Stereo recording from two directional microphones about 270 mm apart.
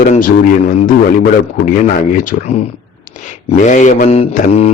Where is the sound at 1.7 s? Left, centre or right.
Left.